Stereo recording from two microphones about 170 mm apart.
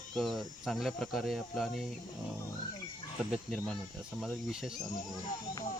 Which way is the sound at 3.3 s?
Centre (ahead or behind).